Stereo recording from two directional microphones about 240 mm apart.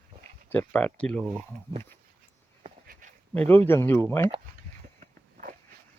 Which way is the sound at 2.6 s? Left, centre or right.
Right.